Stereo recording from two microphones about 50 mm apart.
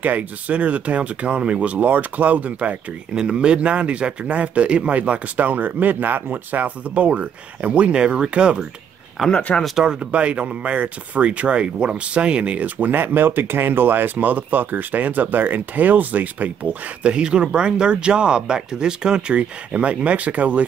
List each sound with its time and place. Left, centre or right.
0.0 s speech: right
3.2 s speech: centre
9.3 s speech: left
9.8 s speech: right